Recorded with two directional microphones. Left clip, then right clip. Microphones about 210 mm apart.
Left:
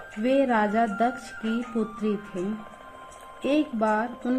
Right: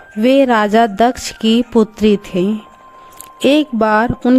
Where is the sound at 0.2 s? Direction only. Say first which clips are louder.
Right 11 dB; 50° right (ahead or behind).